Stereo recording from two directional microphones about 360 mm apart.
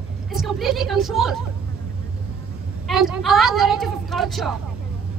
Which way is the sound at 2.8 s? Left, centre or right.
Centre.